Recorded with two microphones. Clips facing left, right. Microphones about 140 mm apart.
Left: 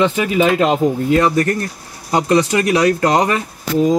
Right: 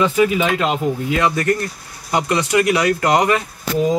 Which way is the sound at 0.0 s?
35° left (ahead or behind).